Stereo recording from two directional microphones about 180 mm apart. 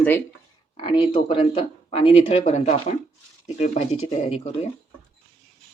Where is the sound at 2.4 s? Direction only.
45° left (ahead or behind).